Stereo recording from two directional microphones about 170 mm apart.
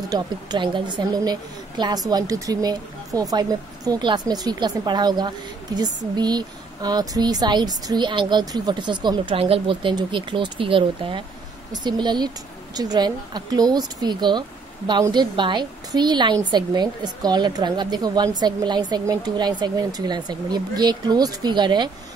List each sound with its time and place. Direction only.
0.1 s a woman's voice: 25° right (ahead or behind)